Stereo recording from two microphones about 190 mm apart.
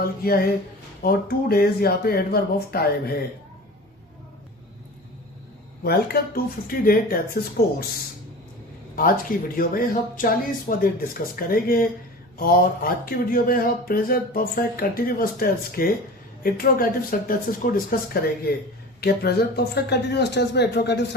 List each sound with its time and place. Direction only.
0.0 s speech: 55° left (ahead or behind)
5.8 s speech: 55° left (ahead or behind)
9.0 s speech: 45° left (ahead or behind); by 21.2 s 65° left (ahead or behind)